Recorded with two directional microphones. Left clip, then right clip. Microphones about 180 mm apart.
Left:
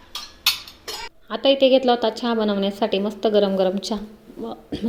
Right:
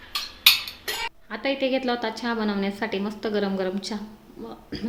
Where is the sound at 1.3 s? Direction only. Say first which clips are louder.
Left 10 dB; 15° left (ahead or behind).